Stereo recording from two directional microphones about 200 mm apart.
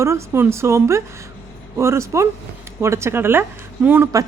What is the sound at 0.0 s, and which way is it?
A woman's voice, 15° right (ahead or behind).